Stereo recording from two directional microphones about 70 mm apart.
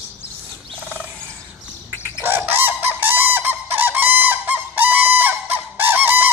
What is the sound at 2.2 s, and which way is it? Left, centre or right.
Fowl, right.